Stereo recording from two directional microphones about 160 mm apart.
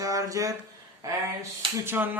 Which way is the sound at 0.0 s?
20° right (ahead or behind).